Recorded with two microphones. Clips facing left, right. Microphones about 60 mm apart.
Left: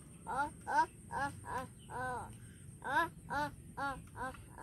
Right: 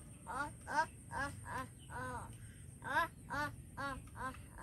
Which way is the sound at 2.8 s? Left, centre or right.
Centre.